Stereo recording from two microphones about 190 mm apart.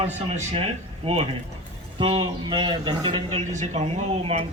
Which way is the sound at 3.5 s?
35° right (ahead or behind).